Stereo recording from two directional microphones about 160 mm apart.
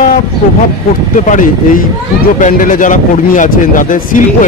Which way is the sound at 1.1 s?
55° left (ahead or behind).